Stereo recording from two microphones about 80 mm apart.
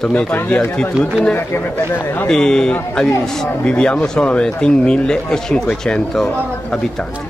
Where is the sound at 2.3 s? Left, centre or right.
Centre.